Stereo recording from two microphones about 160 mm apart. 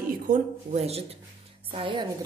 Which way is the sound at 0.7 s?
40° right (ahead or behind).